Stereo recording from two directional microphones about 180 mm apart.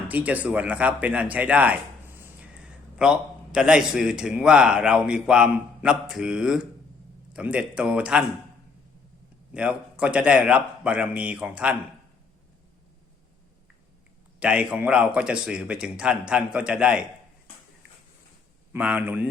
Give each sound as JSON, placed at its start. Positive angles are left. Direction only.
{"t": 0.1, "sound": "a man's voice", "side_deg": -10}
{"t": 9.5, "sound": "a man's voice", "side_deg": -5}
{"t": 14.3, "sound": "a man's voice", "side_deg": -5}
{"t": 18.7, "sound": "a man's voice", "side_deg": -5}